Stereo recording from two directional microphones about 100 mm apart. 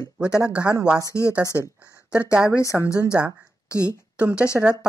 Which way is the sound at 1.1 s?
30° left (ahead or behind).